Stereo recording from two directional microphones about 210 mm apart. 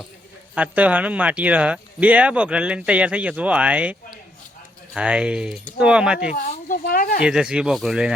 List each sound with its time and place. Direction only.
0.5 s speech: 5° right (ahead or behind)
4.9 s speech: 5° right (ahead or behind)
6.3 s speech: 40° left (ahead or behind)
7.2 s speech: 5° right (ahead or behind)